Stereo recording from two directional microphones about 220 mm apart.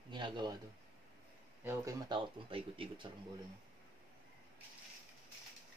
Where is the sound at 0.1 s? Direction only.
20° right (ahead or behind).